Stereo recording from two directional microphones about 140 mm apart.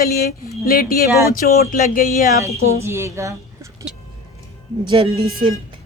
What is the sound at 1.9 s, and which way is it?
Speech, 80° left.